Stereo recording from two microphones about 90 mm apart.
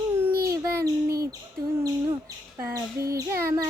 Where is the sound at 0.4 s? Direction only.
40° right (ahead or behind).